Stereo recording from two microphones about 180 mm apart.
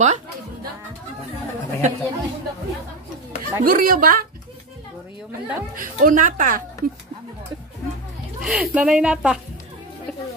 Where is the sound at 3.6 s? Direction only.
50° right (ahead or behind).